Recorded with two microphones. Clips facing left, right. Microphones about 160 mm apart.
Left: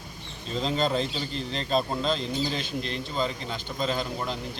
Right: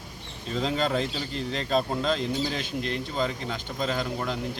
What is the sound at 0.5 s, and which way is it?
Speech, 25° left (ahead or behind).